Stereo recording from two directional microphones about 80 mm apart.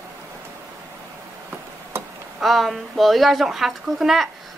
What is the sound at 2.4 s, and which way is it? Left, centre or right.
Speech, centre.